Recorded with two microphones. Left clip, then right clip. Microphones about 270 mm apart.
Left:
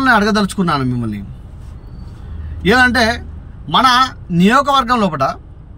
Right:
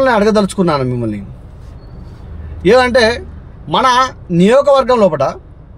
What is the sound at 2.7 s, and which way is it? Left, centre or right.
Speech, right.